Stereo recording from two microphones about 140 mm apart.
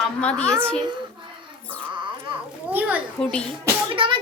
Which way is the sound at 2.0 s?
35° right (ahead or behind).